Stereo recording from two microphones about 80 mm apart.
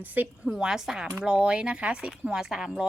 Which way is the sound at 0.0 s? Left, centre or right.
Right.